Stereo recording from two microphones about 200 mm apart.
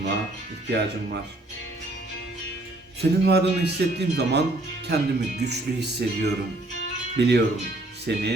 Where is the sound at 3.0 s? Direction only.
55° right (ahead or behind).